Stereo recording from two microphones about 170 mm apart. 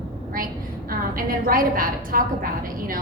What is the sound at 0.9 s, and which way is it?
A woman's voice, 55° right (ahead or behind).